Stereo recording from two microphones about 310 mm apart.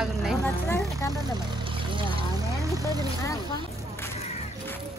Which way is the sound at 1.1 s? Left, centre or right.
Centre.